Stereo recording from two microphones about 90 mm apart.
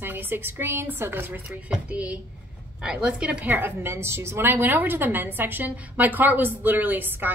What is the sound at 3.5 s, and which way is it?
A woman's voice, 25° right (ahead or behind).